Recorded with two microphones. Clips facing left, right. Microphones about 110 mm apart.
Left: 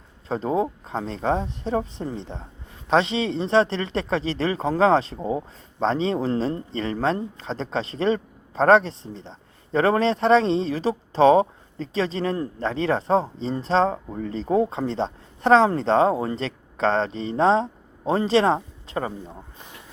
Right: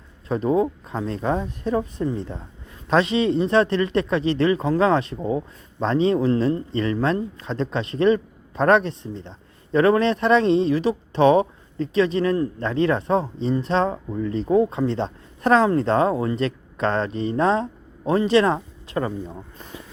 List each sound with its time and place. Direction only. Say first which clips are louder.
0.3 s speech: right 3 dB; 30° left (ahead or behind)
5.2 s speech: right 2 dB; 15° left (ahead or behind)
5.8 s speech: right 3 dB; 30° left (ahead or behind)